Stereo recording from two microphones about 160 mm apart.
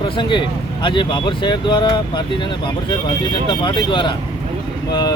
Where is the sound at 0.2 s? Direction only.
30° left (ahead or behind).